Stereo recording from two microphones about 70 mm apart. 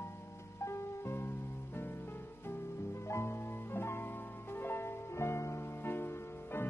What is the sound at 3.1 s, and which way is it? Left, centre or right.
Music, left.